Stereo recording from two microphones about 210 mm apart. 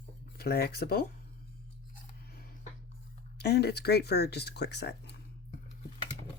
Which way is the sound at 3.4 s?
50° left (ahead or behind).